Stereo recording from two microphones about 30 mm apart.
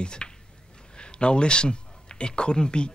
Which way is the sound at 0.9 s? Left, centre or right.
Left.